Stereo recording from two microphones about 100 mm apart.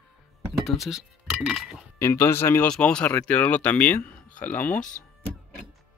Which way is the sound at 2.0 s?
25° left (ahead or behind).